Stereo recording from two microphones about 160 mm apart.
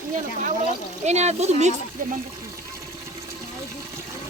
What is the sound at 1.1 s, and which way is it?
Speech, 45° right (ahead or behind).